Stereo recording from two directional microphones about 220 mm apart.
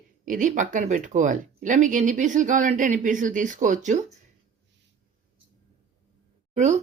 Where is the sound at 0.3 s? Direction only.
35° right (ahead or behind).